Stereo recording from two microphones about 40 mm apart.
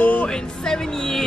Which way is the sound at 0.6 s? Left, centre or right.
Centre.